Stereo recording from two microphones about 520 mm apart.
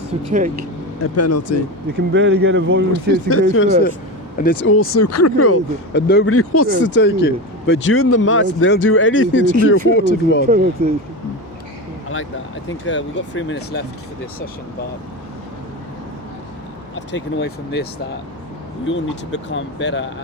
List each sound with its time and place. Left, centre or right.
1.0 s speech: left
2.0 s speech: centre
2.9 s speech: left
10.4 s speech: centre
12.6 s speech: left
17.1 s speech: left
18.9 s speech: left